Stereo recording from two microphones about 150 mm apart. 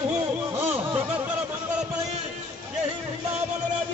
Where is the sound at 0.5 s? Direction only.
15° right (ahead or behind).